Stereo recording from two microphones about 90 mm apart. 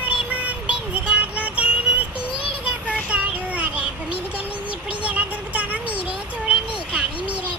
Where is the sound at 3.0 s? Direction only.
15° right (ahead or behind).